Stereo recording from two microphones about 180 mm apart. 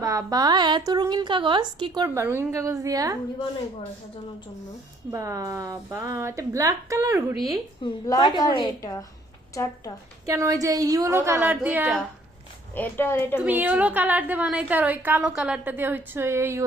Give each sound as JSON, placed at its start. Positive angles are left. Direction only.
{"t": 0.0, "sound": "a woman's voice", "side_deg": -20}
{"t": 5.1, "sound": "a woman's voice", "side_deg": -15}
{"t": 7.8, "sound": "a woman's voice", "side_deg": 25}
{"t": 10.2, "sound": "a woman's voice", "side_deg": -15}
{"t": 12.7, "sound": "speech", "side_deg": 10}
{"t": 13.4, "sound": "a woman's voice", "side_deg": -10}